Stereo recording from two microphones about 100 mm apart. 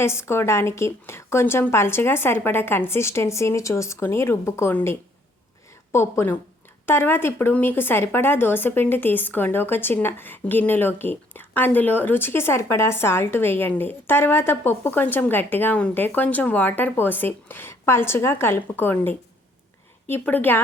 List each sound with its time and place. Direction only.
0.0 s speech: 25° left (ahead or behind)